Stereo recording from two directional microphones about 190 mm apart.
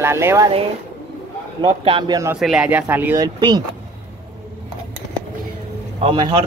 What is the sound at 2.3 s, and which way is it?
Speech, 5° right (ahead or behind).